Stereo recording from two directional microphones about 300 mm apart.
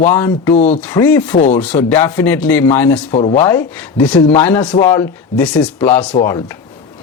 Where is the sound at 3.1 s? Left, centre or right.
Centre.